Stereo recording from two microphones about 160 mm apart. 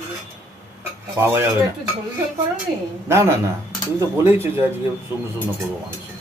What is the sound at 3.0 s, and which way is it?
Speech, 15° right (ahead or behind).